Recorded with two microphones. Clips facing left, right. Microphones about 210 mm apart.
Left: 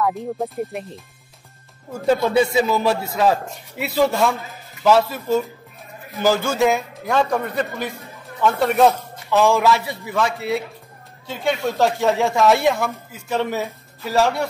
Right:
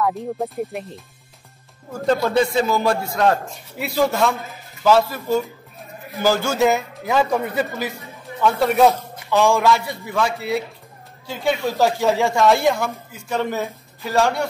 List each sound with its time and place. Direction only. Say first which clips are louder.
0.0 s speech: even; centre (ahead or behind)
2.2 s speech: left 1 dB; 5° left (ahead or behind)